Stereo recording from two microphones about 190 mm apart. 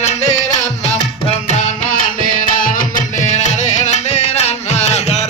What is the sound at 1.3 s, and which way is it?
Music, 35° left (ahead or behind).